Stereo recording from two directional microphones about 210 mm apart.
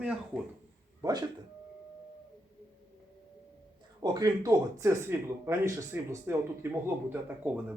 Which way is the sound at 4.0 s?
20° right (ahead or behind).